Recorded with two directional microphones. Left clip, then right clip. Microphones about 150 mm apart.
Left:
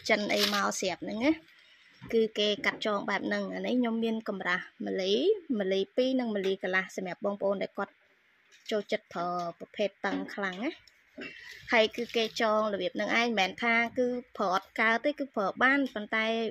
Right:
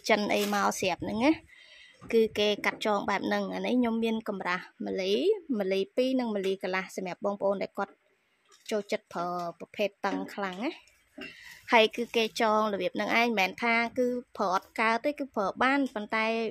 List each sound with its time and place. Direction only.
0.0 s a woman's voice: 15° right (ahead or behind)